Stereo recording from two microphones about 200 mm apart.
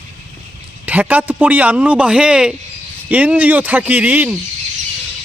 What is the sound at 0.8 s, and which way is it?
A man's voice, 10° right (ahead or behind).